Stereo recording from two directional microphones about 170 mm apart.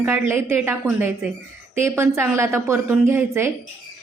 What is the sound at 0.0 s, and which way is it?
Speech, 10° right (ahead or behind).